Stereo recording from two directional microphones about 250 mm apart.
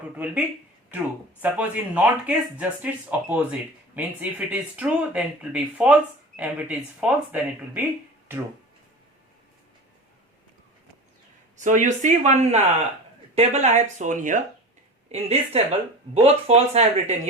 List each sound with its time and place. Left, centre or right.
0.0 s speech: centre
11.5 s speech: right